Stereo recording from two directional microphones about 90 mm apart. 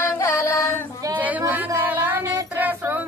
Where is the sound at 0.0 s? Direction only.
30° left (ahead or behind).